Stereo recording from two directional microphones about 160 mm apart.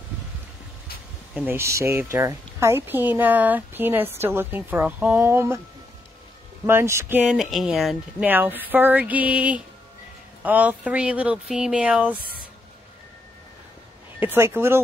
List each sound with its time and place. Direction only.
1.3 s speech: 15° right (ahead or behind)
6.6 s speech: 15° right (ahead or behind)
8.3 s speech: 10° right (ahead or behind)
14.2 s speech: 15° right (ahead or behind)